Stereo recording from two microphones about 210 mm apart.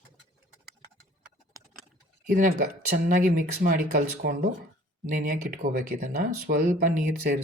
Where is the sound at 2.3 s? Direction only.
45° right (ahead or behind).